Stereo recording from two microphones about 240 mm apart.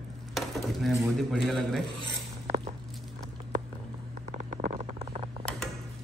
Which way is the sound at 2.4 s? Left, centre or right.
Right.